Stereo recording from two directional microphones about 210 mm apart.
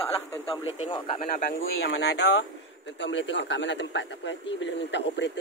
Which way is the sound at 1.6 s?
55° left (ahead or behind).